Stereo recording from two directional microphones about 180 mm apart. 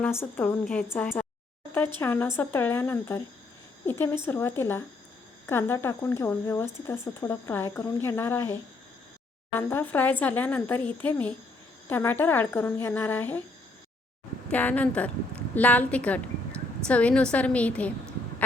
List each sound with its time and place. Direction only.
0.0 s speech: 10° left (ahead or behind)
9.6 s speech: 10° left (ahead or behind)
14.5 s speech: 10° left (ahead or behind)